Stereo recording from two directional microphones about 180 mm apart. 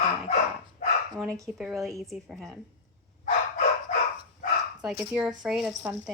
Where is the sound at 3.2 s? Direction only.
50° left (ahead or behind).